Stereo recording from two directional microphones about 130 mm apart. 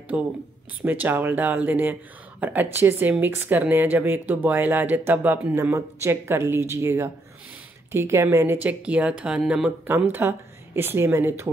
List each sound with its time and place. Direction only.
0.1 s speech: 10° right (ahead or behind)
9.8 s speech: 15° right (ahead or behind)